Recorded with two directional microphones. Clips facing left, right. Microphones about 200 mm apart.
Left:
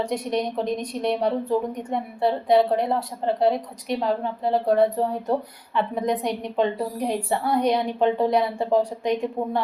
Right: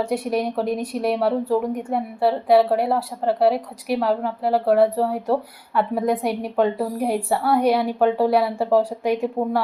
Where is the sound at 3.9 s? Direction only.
70° right (ahead or behind).